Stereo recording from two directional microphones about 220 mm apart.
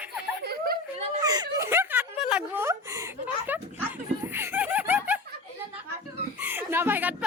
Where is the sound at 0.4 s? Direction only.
45° right (ahead or behind).